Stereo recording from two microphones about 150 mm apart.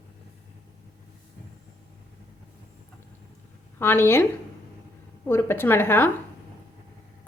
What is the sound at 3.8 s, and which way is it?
Speech, 15° left (ahead or behind).